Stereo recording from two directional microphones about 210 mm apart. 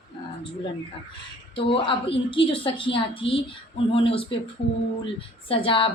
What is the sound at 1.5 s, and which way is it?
Speech, 25° left (ahead or behind).